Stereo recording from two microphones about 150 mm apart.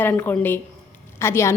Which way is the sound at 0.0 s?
15° left (ahead or behind).